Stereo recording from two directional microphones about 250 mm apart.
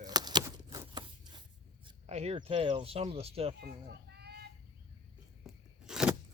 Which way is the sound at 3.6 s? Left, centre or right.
Right.